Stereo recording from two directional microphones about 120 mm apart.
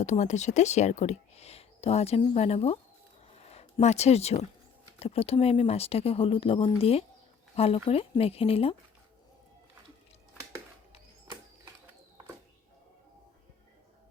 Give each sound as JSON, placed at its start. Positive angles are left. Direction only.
{"t": 0.0, "sound": "speech", "side_deg": 75}
{"t": 3.3, "sound": "a sound", "side_deg": 60}
{"t": 4.9, "sound": "speech", "side_deg": 60}